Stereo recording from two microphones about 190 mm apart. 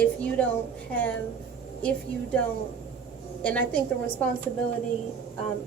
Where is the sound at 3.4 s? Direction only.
10° left (ahead or behind).